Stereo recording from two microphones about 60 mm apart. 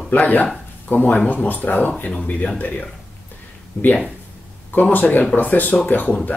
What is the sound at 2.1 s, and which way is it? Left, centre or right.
Speech, centre.